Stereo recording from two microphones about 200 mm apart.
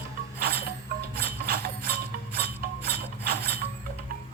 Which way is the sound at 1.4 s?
50° right (ahead or behind).